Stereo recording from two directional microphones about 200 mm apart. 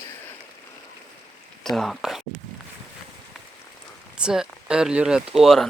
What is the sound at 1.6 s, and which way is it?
Speech, centre (ahead or behind).